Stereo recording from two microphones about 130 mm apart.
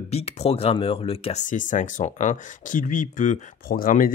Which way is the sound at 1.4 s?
75° left (ahead or behind).